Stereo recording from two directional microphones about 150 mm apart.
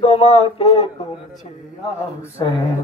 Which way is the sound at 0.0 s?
40° left (ahead or behind).